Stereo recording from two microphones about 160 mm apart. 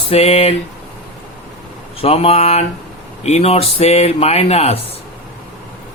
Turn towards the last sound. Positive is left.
turn(degrees=40)  # may be behind; listen again after turning